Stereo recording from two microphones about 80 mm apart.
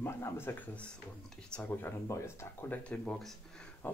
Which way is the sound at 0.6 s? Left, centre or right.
Centre.